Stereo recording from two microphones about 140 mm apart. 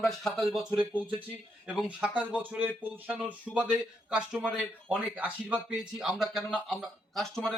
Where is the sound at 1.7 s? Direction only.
10° right (ahead or behind).